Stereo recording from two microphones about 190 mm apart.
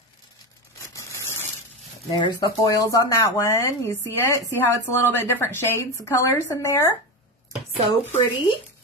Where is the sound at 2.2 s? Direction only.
20° left (ahead or behind).